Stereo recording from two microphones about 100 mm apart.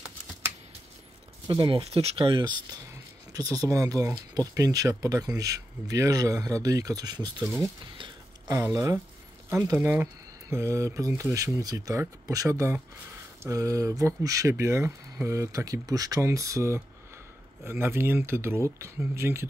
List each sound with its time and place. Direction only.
1.7 s speech: 85° right; by 2.5 s 60° right (ahead or behind)
3.3 s speech: 35° right (ahead or behind)
7.4 s speech: 25° right (ahead or behind)
8.7 s speech: 30° right (ahead or behind)
10.5 s speech: 30° right (ahead or behind)